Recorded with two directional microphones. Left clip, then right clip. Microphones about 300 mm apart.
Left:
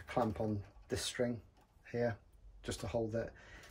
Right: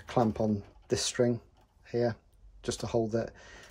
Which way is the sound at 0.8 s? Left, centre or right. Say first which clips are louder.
Right 9 dB; centre.